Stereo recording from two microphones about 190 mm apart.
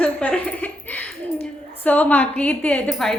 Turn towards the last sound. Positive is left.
turn(degrees=5)  # may be behind; listen again after turning